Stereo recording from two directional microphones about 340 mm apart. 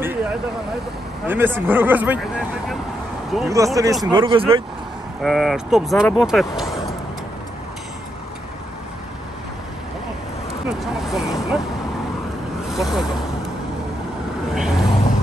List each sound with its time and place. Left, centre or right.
0.0 s vehicle: centre
1.2 s speech: centre
5.2 s speech: centre
10.8 s vehicle: centre
12.6 s vehicle: centre
14.5 s vehicle: centre